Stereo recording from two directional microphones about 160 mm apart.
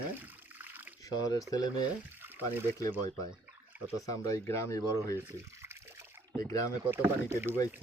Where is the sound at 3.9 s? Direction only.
20° left (ahead or behind).